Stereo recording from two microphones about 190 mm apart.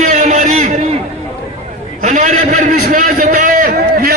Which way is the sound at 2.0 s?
40° right (ahead or behind).